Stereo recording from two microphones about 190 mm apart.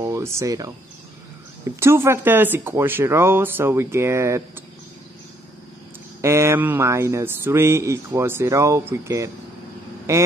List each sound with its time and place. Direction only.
0.0 s speech: 15° right (ahead or behind)
6.2 s speech: 15° right (ahead or behind)